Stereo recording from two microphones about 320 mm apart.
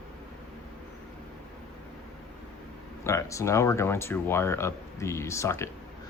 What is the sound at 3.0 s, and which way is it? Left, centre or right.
Speech, centre.